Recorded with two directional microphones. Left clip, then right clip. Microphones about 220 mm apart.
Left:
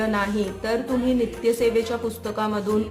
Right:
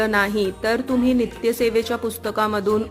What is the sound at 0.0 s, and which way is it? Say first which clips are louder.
Speech: right 5 dB; 35° right (ahead or behind).